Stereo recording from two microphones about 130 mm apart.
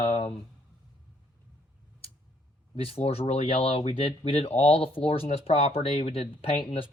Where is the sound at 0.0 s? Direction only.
45° left (ahead or behind).